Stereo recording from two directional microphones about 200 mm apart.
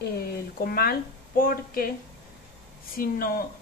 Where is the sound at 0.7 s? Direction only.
45° left (ahead or behind).